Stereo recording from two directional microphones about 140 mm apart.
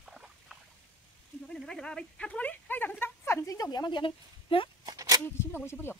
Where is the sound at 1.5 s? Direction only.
5° left (ahead or behind); by 4.6 s 40° left (ahead or behind).